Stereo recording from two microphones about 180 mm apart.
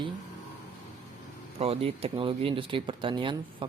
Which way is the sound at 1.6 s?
35° right (ahead or behind).